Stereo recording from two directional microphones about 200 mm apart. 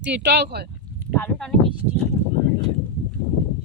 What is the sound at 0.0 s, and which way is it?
Speech, 60° right (ahead or behind).